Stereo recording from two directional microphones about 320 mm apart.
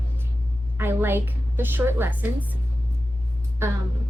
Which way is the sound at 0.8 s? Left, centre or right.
Centre.